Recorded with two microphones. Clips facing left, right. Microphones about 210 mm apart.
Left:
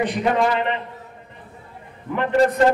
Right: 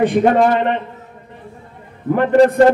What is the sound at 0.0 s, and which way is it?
Speech, 50° right (ahead or behind).